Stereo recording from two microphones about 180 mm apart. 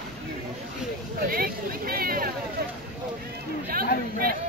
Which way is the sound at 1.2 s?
55° right (ahead or behind).